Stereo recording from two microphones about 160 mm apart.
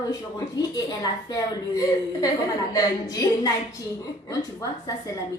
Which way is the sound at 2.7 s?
20° left (ahead or behind).